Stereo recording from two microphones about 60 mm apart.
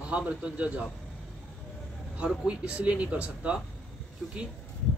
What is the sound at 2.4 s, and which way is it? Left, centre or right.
Speech, right.